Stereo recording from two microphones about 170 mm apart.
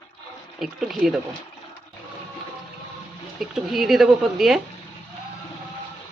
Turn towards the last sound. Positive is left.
turn(degrees=0)  # may be behind; listen again after turning